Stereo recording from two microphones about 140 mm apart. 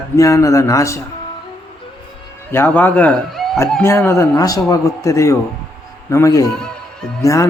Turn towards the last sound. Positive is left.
turn(degrees=20)  # may be behind; listen again after turning